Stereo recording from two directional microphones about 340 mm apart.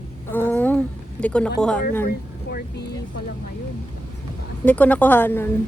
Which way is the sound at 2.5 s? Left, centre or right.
Left.